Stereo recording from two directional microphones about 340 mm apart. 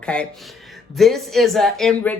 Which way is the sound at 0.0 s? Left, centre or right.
Centre.